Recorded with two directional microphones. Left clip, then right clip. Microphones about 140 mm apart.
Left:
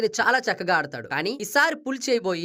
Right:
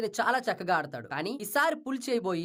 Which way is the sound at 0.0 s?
15° left (ahead or behind).